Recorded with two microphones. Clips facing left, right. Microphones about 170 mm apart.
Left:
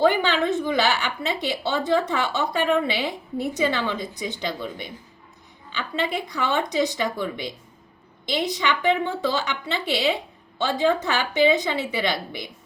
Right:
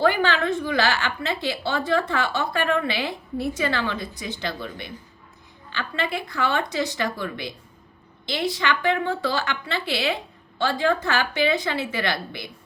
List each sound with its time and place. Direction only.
0.0 s a woman's voice: 20° left (ahead or behind)